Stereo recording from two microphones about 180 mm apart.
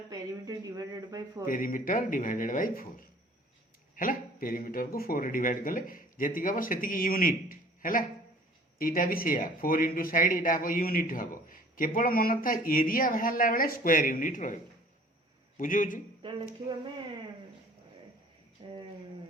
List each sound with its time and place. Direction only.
0.1 s speech: 20° right (ahead or behind)
1.5 s speech: 50° left (ahead or behind)
3.9 s speech: 50° left (ahead or behind)
16.2 s speech: 25° right (ahead or behind)
18.6 s a sound: 25° right (ahead or behind)